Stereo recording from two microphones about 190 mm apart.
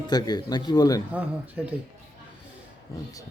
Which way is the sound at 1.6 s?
5° right (ahead or behind).